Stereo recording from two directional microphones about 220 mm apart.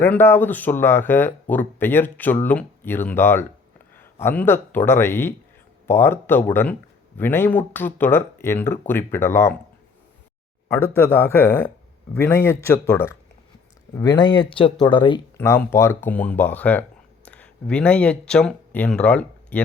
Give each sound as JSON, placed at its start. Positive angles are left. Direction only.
{"t": 0.0, "sound": "speech", "side_deg": 10}
{"t": 10.7, "sound": "speech", "side_deg": 10}
{"t": 15.4, "sound": "speech", "side_deg": 10}